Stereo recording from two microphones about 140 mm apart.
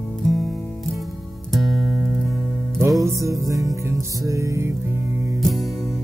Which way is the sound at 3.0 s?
25° right (ahead or behind).